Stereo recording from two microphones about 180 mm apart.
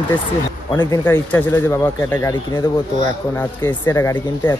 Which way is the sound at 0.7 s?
10° left (ahead or behind).